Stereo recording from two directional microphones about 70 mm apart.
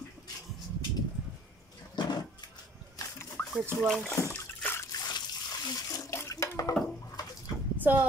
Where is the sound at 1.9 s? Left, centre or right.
Left.